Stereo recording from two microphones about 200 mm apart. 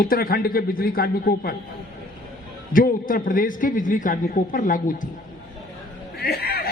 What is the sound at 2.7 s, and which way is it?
A man's voice, 45° left (ahead or behind).